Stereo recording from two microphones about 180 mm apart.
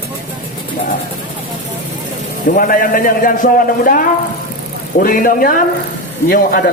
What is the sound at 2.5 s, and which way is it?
A man's voice, 50° left (ahead or behind).